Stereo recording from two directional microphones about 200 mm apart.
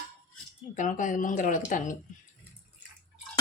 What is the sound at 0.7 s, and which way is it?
A woman's voice, 40° left (ahead or behind).